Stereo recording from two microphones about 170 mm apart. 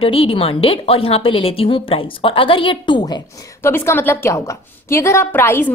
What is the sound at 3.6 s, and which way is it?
A woman's voice, 15° left (ahead or behind).